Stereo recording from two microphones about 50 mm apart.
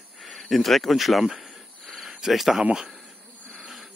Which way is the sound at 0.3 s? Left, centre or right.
Centre.